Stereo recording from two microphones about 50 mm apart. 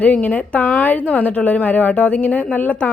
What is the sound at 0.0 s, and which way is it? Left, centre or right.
A woman's voice, left.